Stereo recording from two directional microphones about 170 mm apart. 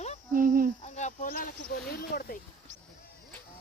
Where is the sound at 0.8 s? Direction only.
45° left (ahead or behind); by 2.4 s 60° left (ahead or behind).